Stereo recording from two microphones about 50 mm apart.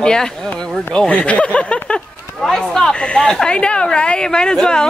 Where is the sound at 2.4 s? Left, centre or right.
Centre.